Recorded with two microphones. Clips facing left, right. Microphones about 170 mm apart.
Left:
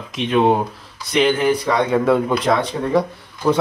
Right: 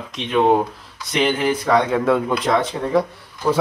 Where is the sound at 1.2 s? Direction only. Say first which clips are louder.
Left 3 dB; centre (ahead or behind).